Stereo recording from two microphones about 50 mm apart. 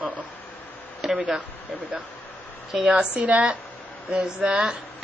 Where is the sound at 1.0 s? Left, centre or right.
Centre.